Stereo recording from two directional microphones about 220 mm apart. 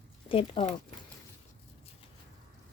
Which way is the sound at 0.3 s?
25° left (ahead or behind).